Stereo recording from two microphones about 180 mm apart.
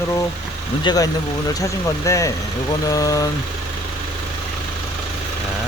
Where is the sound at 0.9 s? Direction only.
20° left (ahead or behind).